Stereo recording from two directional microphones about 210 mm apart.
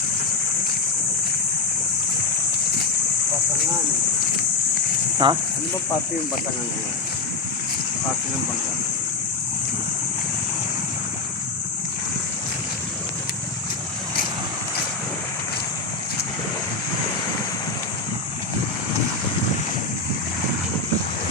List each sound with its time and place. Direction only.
5.1 s speech: 20° right (ahead or behind)